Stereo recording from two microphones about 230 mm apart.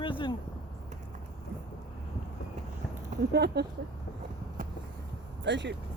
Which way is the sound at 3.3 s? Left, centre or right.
Right.